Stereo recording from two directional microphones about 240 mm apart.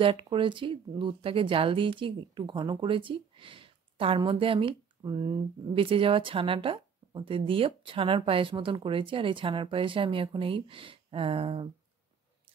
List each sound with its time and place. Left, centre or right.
0.0 s speech: right